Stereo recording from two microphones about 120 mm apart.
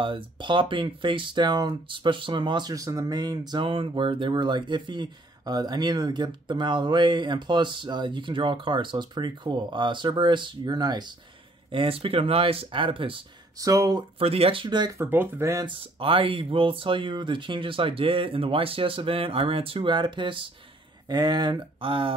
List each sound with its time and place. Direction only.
0.0 s speech: 45° right (ahead or behind)
11.7 s speech: 50° right (ahead or behind)
13.6 s speech: 30° right (ahead or behind)
14.1 s speech: 55° right (ahead or behind)
15.0 s speech: 20° right (ahead or behind)
15.6 s speech: 50° right (ahead or behind)